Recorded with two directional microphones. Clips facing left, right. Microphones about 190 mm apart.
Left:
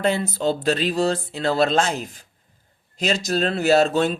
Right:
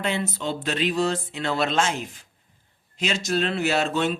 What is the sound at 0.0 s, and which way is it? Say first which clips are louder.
Speech: left 6 dB; 35° left (ahead or behind).